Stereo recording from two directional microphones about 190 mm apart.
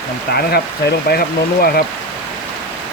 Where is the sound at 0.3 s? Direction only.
55° left (ahead or behind).